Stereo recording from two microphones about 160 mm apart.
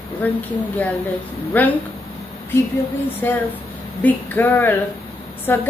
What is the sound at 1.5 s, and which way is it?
Speech, 10° left (ahead or behind).